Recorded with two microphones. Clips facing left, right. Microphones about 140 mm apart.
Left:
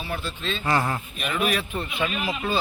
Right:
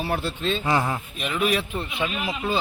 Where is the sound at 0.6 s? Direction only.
10° right (ahead or behind).